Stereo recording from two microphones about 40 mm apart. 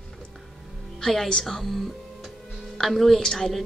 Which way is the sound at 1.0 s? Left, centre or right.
Centre.